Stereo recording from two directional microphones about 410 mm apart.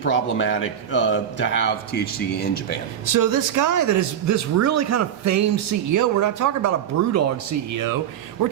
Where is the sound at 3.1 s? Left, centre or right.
Right.